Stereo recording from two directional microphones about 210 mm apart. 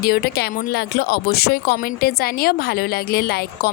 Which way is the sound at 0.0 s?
50° left (ahead or behind).